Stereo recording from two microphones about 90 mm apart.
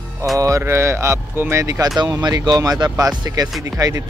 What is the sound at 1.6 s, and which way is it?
A man's voice, 40° right (ahead or behind).